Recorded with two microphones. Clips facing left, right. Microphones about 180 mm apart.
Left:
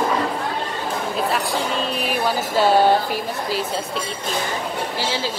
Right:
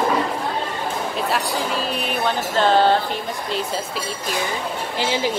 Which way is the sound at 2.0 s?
5° left (ahead or behind).